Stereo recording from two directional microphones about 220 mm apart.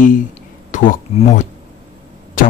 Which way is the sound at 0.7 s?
35° left (ahead or behind).